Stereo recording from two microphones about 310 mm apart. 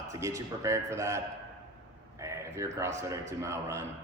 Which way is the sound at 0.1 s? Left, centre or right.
Centre.